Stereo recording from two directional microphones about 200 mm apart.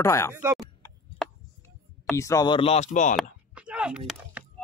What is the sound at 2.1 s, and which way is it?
A man's voice, 15° left (ahead or behind).